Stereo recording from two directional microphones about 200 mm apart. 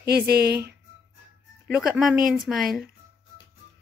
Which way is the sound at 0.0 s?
50° right (ahead or behind).